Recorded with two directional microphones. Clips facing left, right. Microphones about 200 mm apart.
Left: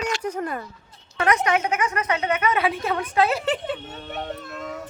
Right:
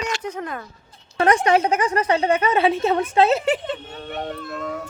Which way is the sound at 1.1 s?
30° right (ahead or behind).